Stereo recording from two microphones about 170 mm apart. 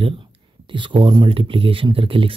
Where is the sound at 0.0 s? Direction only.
30° right (ahead or behind).